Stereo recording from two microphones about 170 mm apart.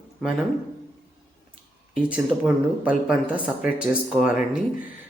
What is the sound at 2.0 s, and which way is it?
Speech, 5° right (ahead or behind).